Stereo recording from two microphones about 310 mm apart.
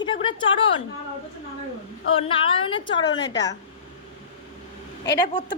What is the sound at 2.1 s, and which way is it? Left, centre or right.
A woman's voice, centre.